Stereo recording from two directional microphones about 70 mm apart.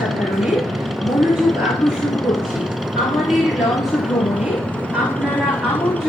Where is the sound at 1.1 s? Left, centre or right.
Centre.